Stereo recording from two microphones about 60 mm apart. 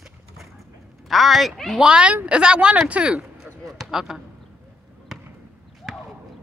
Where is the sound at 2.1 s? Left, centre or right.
Right.